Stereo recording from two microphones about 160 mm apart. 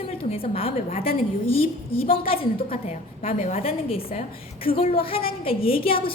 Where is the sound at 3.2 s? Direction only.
50° left (ahead or behind).